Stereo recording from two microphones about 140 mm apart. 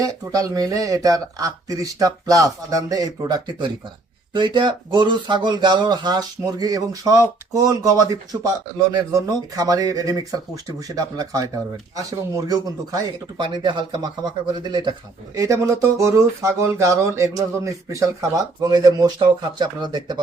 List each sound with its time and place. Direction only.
0.0 s speech: 25° right (ahead or behind)
15.4 s speech: 20° right (ahead or behind)